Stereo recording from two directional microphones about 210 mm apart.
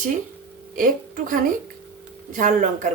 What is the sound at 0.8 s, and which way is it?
Speech, 40° right (ahead or behind).